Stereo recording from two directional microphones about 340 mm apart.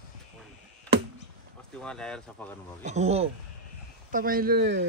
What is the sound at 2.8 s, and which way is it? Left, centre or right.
Speech, centre.